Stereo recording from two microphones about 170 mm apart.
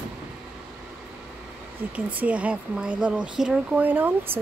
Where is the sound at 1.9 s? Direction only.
10° right (ahead or behind).